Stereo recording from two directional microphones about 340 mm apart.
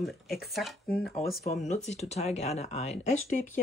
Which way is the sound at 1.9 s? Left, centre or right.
Centre.